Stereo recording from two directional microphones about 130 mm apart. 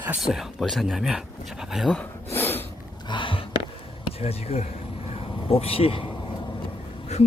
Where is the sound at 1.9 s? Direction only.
10° left (ahead or behind).